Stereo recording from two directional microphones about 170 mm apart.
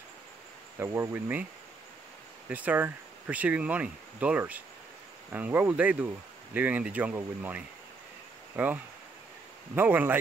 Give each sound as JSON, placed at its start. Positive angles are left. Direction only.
{"t": 0.7, "sound": "speech", "side_deg": -15}
{"t": 2.5, "sound": "speech", "side_deg": -10}
{"t": 9.8, "sound": "speech", "side_deg": -10}